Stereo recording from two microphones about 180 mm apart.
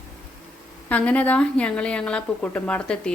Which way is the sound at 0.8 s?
10° left (ahead or behind).